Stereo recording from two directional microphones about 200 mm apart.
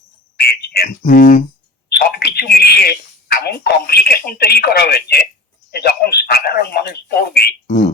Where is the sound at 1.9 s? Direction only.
55° left (ahead or behind).